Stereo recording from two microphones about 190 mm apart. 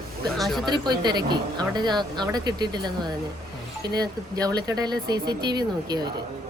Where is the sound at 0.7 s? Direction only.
20° right (ahead or behind).